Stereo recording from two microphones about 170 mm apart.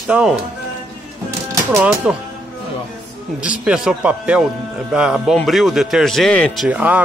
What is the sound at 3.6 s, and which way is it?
Speech, 5° right (ahead or behind).